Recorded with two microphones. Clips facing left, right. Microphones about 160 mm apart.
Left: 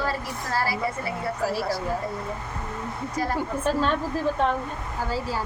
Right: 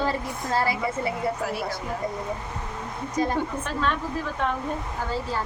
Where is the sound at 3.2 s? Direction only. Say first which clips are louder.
Right 3 dB; 20° right (ahead or behind).